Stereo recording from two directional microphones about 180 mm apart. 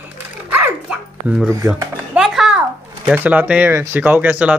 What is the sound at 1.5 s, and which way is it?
Speech, 15° right (ahead or behind).